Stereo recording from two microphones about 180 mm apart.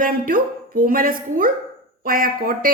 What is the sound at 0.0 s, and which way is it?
A woman's voice, 50° right (ahead or behind).